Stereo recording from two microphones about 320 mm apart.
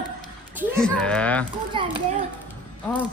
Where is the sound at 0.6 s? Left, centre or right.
Centre.